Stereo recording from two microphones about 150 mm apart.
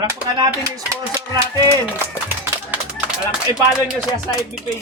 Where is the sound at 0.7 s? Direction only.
25° right (ahead or behind).